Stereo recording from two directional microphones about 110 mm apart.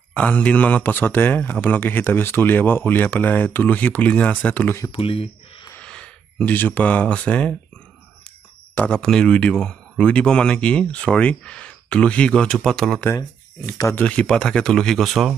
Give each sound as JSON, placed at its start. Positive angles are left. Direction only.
{"t": 0.1, "sound": "speech", "side_deg": 10}
{"t": 4.9, "sound": "speech", "side_deg": 55}
{"t": 5.8, "sound": "speech", "side_deg": 10}
{"t": 8.7, "sound": "speech", "side_deg": 10}